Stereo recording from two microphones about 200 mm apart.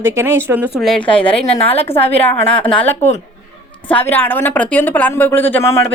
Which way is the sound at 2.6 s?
5° left (ahead or behind).